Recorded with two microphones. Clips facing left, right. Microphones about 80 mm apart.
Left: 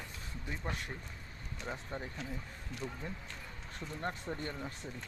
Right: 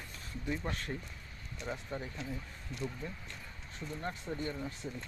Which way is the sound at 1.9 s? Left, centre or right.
Left.